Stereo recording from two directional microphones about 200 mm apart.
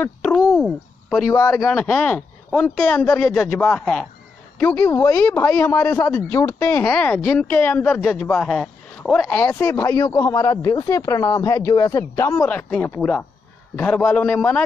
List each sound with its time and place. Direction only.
0.0 s a sound: 5° left (ahead or behind)
0.6 s speech: centre (ahead or behind)
1.3 s speech: 15° left (ahead or behind)